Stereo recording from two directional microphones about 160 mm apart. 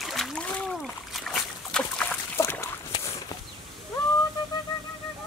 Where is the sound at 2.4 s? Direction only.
15° left (ahead or behind).